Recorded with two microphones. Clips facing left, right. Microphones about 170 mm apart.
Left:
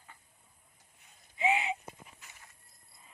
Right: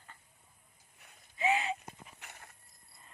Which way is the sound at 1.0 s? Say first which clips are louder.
Right 5 dB; 65° right (ahead or behind).